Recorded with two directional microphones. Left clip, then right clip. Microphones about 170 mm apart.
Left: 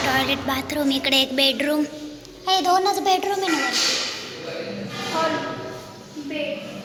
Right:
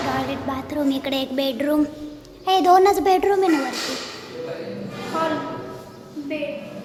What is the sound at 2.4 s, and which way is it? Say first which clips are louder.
A woman's voice: right 4 dB; 55° right (ahead or behind).